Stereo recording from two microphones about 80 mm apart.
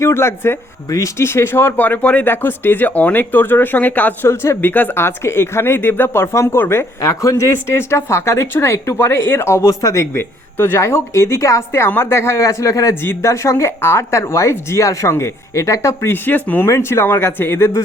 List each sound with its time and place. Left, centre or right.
0.0 s speech: left
0.9 s speech: left
1.2 s speech: left
4.3 s speech: left
7.0 s speech: left
12.9 s speech: left
16.1 s speech: left